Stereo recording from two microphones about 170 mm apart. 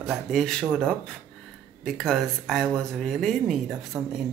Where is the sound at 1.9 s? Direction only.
Centre (ahead or behind).